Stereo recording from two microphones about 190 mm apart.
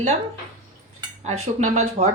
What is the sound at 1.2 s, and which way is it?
Speech, 35° right (ahead or behind).